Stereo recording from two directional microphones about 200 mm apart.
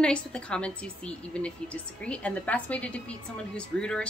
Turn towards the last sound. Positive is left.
turn(degrees=5)  # may be behind; listen again after turning